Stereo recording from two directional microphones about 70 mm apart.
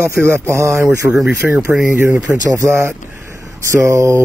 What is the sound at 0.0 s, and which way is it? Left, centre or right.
Speech, right.